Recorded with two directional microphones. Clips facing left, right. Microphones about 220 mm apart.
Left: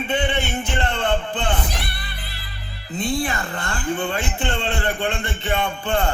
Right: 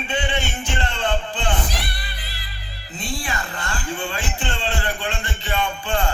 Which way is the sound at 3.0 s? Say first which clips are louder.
Left 6 dB; 55° left (ahead or behind).